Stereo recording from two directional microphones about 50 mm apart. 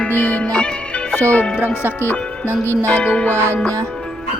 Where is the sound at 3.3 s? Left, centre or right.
Right.